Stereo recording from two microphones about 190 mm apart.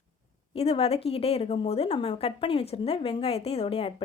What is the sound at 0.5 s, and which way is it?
A woman's voice, 30° left (ahead or behind).